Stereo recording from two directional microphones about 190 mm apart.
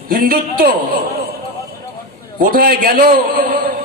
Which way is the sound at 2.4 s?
50° right (ahead or behind).